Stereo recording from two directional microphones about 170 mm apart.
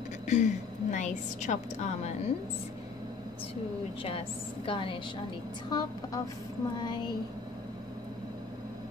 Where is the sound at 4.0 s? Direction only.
35° left (ahead or behind).